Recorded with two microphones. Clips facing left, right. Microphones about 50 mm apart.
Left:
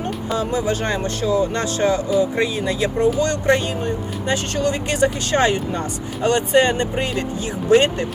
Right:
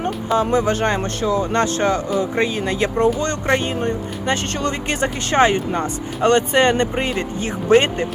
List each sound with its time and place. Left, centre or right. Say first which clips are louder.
0.3 s speech: right 4 dB; right
6.2 s speech: right 1 dB; right